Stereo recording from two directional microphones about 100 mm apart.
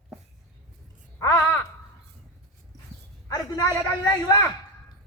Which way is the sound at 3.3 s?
40° left (ahead or behind).